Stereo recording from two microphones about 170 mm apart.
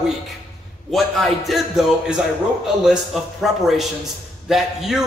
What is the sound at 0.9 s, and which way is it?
A man's voice, centre (ahead or behind).